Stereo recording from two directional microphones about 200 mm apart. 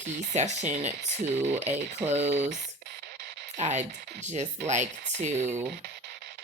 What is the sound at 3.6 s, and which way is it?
Speech, 35° right (ahead or behind).